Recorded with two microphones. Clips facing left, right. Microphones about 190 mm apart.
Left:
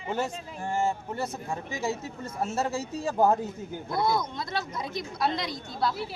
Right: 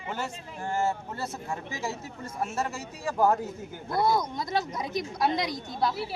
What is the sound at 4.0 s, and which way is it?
A woman's voice, 10° right (ahead or behind).